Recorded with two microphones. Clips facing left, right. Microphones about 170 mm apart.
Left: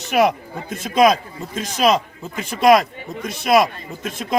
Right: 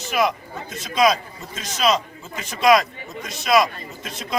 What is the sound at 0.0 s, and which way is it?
A man's voice, 60° left (ahead or behind).